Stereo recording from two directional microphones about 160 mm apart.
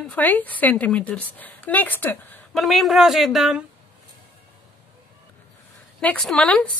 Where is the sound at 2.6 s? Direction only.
Centre (ahead or behind).